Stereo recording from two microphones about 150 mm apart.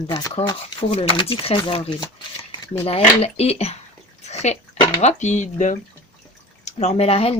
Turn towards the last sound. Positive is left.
turn(degrees=40)  # may be behind; listen again after turning